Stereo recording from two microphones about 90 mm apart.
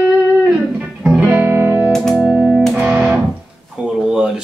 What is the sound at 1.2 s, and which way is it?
Music, 25° right (ahead or behind).